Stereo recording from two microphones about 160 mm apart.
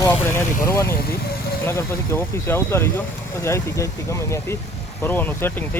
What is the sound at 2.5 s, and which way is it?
Speech, 15° left (ahead or behind).